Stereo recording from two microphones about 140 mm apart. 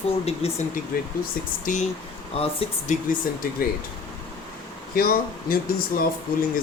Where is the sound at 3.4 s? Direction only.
80° left.